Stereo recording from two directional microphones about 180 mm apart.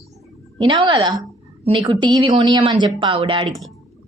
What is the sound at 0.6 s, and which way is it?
A woman's voice, 25° right (ahead or behind).